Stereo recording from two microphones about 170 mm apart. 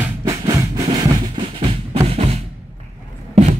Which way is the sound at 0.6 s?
20° right (ahead or behind).